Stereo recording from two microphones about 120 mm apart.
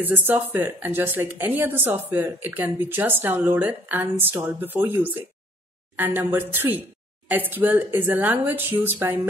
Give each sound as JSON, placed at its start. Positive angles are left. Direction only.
{"t": 0.0, "sound": "a woman's voice", "side_deg": -15}